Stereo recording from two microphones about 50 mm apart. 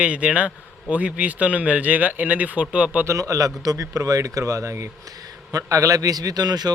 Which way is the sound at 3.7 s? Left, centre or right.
Right.